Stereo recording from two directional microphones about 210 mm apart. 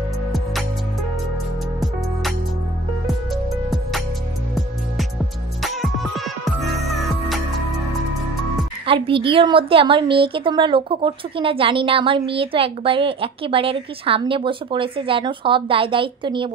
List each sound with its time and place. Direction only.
5.6 s music: centre (ahead or behind)
8.8 s a woman's voice: 25° right (ahead or behind)